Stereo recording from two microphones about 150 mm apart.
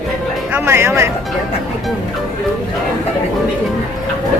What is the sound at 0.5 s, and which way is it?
Speech, 15° right (ahead or behind).